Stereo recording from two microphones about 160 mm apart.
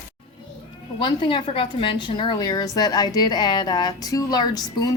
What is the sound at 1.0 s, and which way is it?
A woman's voice, 30° left (ahead or behind).